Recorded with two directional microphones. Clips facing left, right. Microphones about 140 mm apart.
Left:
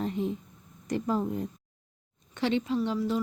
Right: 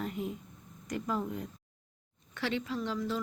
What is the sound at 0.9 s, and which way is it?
A woman's voice, 30° left (ahead or behind).